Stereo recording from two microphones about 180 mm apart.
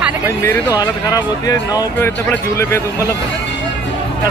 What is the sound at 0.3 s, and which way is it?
Speech, 10° left (ahead or behind).